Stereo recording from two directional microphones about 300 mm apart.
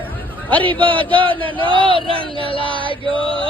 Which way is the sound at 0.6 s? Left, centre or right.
Centre.